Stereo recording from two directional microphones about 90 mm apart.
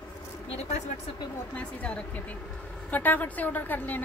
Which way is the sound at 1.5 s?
15° left (ahead or behind).